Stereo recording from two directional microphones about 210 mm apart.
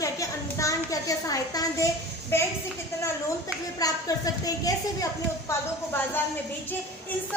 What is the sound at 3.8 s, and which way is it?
A woman's voice, 15° left (ahead or behind).